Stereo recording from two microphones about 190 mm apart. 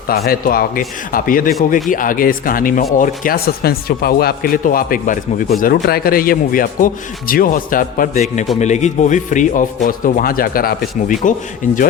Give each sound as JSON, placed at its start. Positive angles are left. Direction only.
{"t": 0.1, "sound": "a man's voice", "side_deg": 50}